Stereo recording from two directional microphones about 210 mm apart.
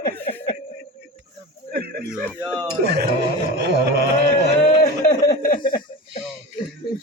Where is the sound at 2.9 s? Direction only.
50° right (ahead or behind).